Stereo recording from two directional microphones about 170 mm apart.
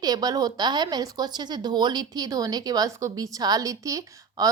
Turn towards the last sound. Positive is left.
turn(degrees=-20)  # may be behind; listen again after turning